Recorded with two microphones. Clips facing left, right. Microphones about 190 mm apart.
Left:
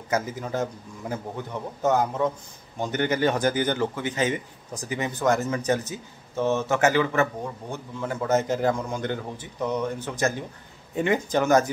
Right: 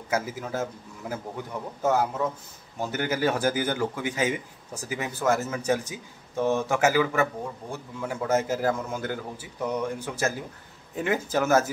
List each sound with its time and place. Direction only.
0.1 s a man's voice: 5° right (ahead or behind)